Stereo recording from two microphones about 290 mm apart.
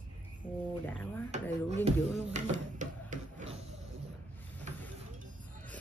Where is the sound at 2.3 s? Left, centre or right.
Right.